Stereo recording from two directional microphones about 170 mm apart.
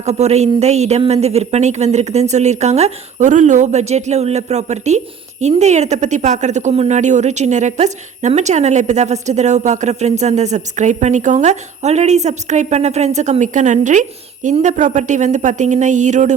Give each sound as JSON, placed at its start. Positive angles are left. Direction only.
{"t": 0.0, "sound": "a woman's voice", "side_deg": -40}